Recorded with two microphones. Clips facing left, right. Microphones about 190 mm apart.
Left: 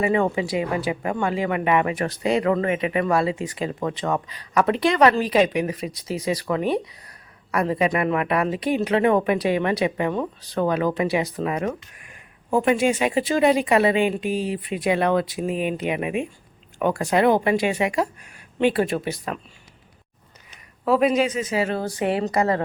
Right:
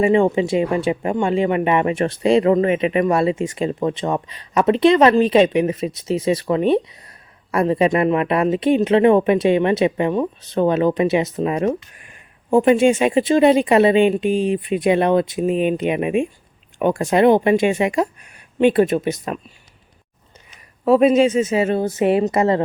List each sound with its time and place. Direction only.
0.0 s speech: 25° right (ahead or behind)
20.8 s speech: 25° right (ahead or behind)